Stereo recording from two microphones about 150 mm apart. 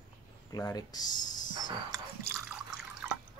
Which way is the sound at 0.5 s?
25° left (ahead or behind).